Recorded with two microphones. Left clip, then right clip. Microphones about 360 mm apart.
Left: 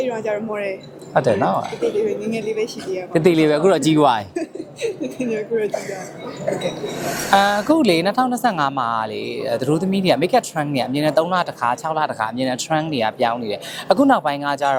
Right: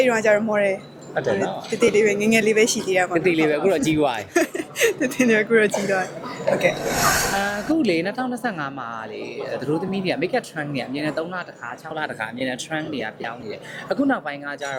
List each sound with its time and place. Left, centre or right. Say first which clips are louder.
0.0 s speech: right 5 dB; right
1.1 s speech: left 6 dB; left
2.0 s speech: right 4 dB; right
3.2 s speech: left 4 dB; left
4.4 s speech: right 6 dB; right
7.3 s speech: left 7 dB; left